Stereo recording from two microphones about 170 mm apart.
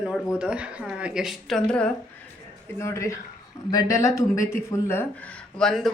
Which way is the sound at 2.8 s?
15° left (ahead or behind).